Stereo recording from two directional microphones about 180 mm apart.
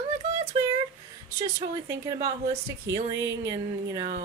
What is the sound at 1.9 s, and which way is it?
Speech, 20° right (ahead or behind).